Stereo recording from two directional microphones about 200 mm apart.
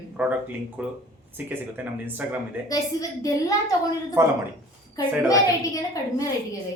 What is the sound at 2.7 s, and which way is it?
Speech, 15° left (ahead or behind).